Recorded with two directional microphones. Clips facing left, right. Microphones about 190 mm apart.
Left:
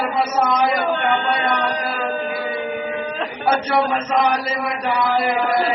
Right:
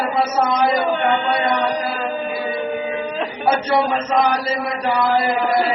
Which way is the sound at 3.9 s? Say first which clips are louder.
Right 1 dB; 30° right (ahead or behind).